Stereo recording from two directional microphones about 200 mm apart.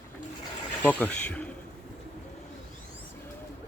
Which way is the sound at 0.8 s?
5° left (ahead or behind).